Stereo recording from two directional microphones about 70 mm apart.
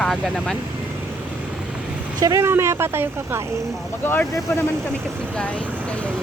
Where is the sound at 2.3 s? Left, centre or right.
Right.